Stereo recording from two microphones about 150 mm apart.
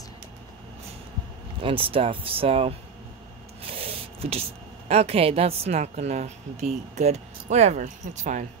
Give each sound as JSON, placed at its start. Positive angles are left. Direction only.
{"t": 1.6, "sound": "speech", "side_deg": -35}